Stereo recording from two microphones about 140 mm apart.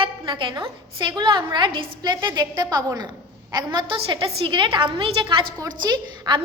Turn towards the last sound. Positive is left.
turn(degrees=-30)  # may be behind; listen again after turning